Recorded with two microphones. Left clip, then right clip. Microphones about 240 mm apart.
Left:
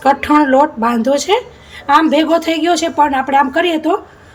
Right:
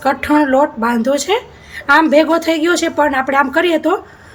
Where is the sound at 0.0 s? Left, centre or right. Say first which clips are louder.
Left 2 dB; centre.